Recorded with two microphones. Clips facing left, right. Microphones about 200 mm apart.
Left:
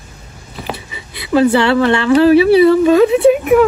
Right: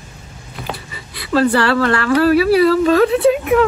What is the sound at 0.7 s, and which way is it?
Speech, 20° left (ahead or behind).